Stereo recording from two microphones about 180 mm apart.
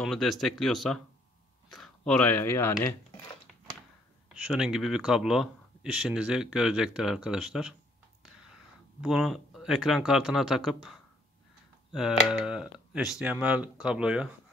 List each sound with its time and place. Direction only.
0.0 s speech: centre (ahead or behind)
4.3 s speech: 5° right (ahead or behind)
9.0 s speech: centre (ahead or behind)
12.3 s speech: 5° right (ahead or behind)